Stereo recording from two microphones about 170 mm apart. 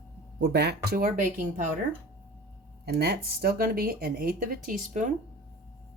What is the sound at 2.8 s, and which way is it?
Speech, 70° right (ahead or behind).